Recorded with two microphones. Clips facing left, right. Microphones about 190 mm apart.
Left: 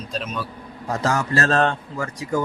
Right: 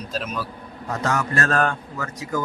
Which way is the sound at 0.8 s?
30° left (ahead or behind).